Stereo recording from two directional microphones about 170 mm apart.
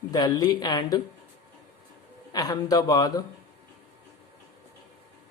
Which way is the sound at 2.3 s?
25° left (ahead or behind).